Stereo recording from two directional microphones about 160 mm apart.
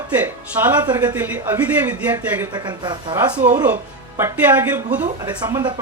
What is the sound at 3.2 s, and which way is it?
Speech, 10° right (ahead or behind).